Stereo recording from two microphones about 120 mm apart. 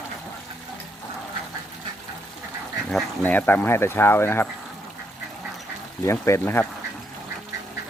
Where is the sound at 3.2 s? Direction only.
15° left (ahead or behind).